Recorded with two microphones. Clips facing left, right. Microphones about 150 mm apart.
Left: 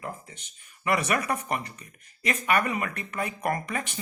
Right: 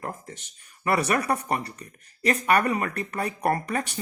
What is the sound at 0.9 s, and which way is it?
Speech, 35° right (ahead or behind).